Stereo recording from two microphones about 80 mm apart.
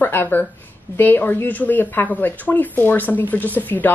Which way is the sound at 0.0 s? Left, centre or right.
Left.